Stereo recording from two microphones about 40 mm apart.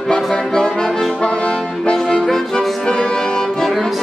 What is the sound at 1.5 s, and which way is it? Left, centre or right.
Music, centre.